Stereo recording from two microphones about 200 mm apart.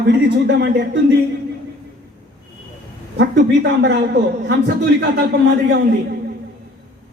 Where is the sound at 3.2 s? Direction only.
60° right (ahead or behind).